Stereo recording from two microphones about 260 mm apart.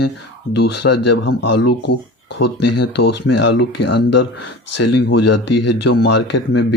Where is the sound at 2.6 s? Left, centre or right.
Left.